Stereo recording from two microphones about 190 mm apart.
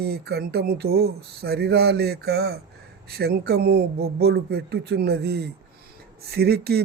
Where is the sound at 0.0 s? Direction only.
55° right (ahead or behind).